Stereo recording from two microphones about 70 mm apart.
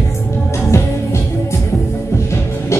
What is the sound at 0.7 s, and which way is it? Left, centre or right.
Music, left.